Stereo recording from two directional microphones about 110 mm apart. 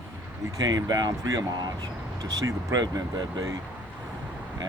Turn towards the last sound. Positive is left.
turn(degrees=-35)  # may be behind; listen again after turning